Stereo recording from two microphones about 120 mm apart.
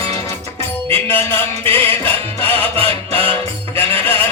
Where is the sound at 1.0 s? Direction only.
20° left (ahead or behind).